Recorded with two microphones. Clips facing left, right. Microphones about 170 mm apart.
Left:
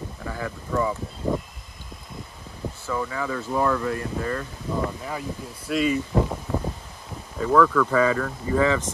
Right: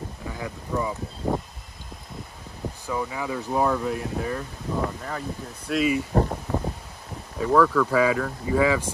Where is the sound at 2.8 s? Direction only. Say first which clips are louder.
Left 1 dB; 15° right (ahead or behind).